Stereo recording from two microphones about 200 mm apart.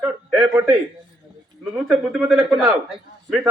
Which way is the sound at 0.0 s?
10° right (ahead or behind).